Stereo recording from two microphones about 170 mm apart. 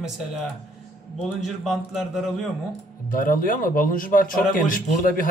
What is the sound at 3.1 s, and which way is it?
A man's voice, 55° left (ahead or behind).